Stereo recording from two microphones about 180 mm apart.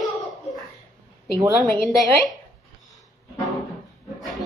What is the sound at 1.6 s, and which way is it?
Speech, centre (ahead or behind).